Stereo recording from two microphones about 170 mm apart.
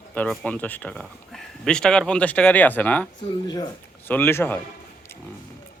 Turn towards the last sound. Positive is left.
turn(degrees=15)  # may be behind; listen again after turning